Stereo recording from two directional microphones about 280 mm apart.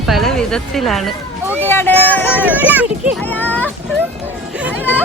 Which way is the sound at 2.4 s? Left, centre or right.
Centre.